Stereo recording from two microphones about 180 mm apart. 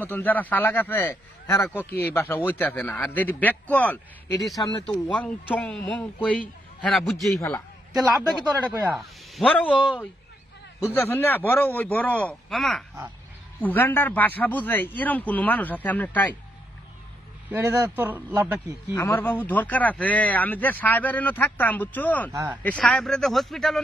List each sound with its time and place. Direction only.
0.0 s speech: 10° left (ahead or behind)
1.9 s speech: 60° left (ahead or behind)
2.1 s speech: 15° left (ahead or behind)
4.6 s speech: 25° left (ahead or behind)
4.9 s speech: 10° left (ahead or behind)
8.6 s speech: centre (ahead or behind)
11.0 s speech: 10° left (ahead or behind)
17.5 s a man's voice: 10° right (ahead or behind)
18.9 s speech: 10° left (ahead or behind)
22.3 s a man's voice: 15° right (ahead or behind)
22.6 s speech: 5° left (ahead or behind)